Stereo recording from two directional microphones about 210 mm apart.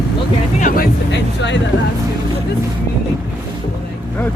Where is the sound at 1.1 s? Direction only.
55° left (ahead or behind).